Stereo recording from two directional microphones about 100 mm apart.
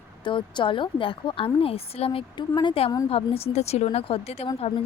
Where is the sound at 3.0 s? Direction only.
80° left.